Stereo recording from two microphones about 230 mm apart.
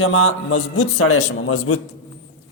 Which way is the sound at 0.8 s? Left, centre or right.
Left.